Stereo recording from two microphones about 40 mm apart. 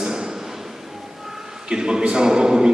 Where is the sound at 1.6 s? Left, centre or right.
Centre.